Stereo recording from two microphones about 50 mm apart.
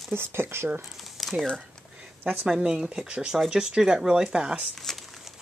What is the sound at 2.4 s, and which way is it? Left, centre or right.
Speech, centre.